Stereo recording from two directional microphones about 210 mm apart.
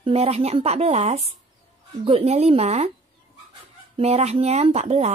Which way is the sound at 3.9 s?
30° right (ahead or behind).